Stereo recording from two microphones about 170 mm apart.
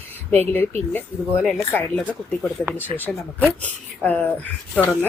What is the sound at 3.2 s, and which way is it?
Speech, 10° left (ahead or behind).